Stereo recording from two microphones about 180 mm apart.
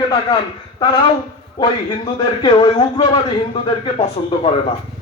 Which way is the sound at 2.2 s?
25° left (ahead or behind).